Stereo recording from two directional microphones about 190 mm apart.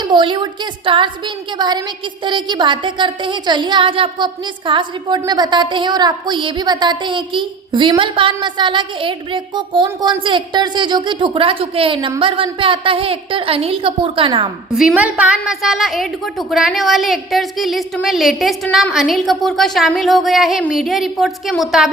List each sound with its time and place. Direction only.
0.0 s a woman's voice: 25° right (ahead or behind)
14.8 s a woman's voice: 5° right (ahead or behind)